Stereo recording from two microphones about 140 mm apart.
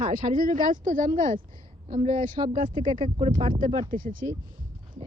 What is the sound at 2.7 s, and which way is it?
Speech, 35° right (ahead or behind).